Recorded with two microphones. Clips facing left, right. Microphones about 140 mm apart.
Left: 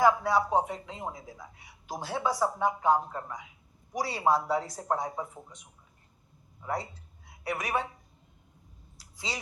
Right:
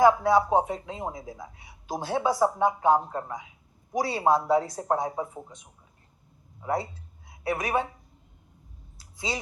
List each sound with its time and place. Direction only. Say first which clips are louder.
0.0 s speech: right 4 dB; 25° right (ahead or behind)
6.6 s a woman's voice: right 5 dB; 20° right (ahead or behind)
9.1 s speech: right 6 dB; 25° right (ahead or behind)